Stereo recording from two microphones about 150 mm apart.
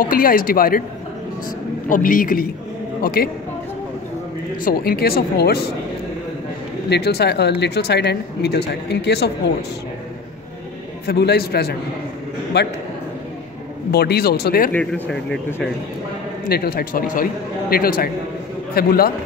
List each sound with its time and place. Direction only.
0.0 s speech: 70° left (ahead or behind)
1.9 s speech: 65° left (ahead or behind)
3.0 s a woman's voice: 90° left
4.6 s speech: 85° left
6.9 s speech: 90° left
11.1 s speech: 90° left
13.9 s speech: 90° left
14.7 s speech: 5° left (ahead or behind)
16.4 s a man's voice: 90° left